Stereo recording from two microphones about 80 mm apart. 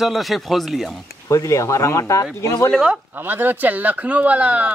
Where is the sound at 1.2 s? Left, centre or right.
Left.